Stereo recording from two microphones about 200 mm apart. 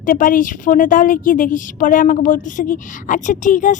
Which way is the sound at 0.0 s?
40° left (ahead or behind).